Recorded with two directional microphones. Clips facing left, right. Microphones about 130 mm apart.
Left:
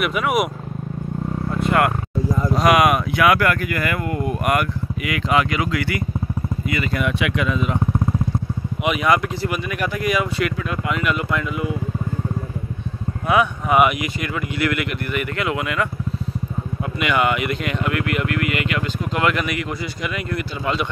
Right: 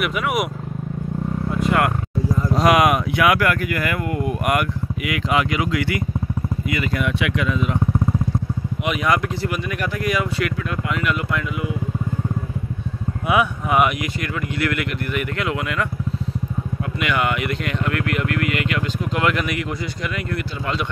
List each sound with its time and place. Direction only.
0.1 s speech: 25° left (ahead or behind)
2.5 s speech: 25° right (ahead or behind)
6.9 s speech: 5° left (ahead or behind)
7.2 s speech: 15° left (ahead or behind)
8.8 s speech: 10° left (ahead or behind)
11.3 s speech: 40° left (ahead or behind)
13.3 s speech: 5° right (ahead or behind)
13.7 s speech: 10° left (ahead or behind)
17.0 s speech: 15° left (ahead or behind)